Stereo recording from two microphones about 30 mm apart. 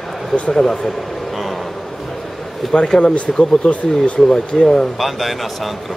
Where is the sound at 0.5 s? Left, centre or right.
Left.